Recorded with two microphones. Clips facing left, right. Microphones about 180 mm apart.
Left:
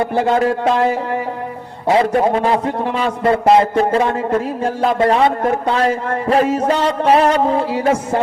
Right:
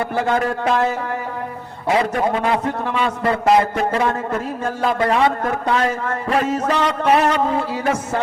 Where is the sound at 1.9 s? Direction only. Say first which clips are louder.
Left 4 dB; 30° left (ahead or behind).